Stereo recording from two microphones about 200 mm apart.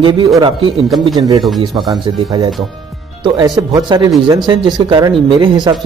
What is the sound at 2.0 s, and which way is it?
Speech, 20° right (ahead or behind).